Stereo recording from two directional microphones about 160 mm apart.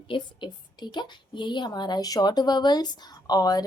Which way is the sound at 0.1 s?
30° left (ahead or behind).